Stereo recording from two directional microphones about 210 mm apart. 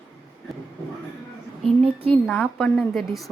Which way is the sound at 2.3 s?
5° left (ahead or behind).